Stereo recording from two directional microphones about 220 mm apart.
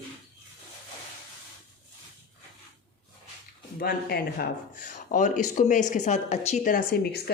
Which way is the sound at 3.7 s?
45° left (ahead or behind).